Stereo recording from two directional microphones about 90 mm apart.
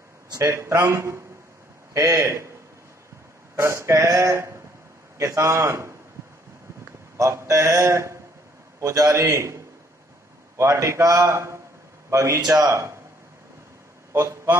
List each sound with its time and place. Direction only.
0.3 s speech: 35° right (ahead or behind)
3.5 s speech: 30° right (ahead or behind)
7.2 s speech: 35° right (ahead or behind)
10.6 s speech: 35° right (ahead or behind)
14.1 s a man's voice: 35° right (ahead or behind)